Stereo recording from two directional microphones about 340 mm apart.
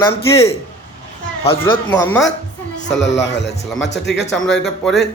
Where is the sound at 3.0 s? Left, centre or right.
Left.